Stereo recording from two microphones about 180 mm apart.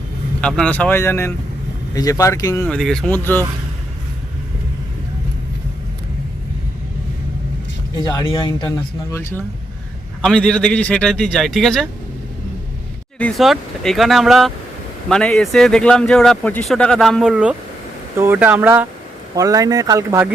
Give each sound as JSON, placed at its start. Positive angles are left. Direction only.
{"t": 0.4, "sound": "speech", "side_deg": 5}
{"t": 2.6, "sound": "speech", "side_deg": 5}
{"t": 8.0, "sound": "speech", "side_deg": 20}
{"t": 10.2, "sound": "speech", "side_deg": 5}
{"t": 13.1, "sound": "speech", "side_deg": 5}